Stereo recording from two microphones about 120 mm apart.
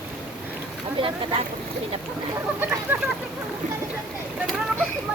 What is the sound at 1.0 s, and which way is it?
Speech, 50° right (ahead or behind).